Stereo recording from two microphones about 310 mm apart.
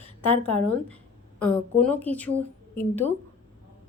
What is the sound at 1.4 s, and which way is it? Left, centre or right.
Speech, centre.